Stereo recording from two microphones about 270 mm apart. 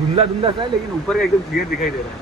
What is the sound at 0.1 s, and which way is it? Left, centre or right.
Speech, centre.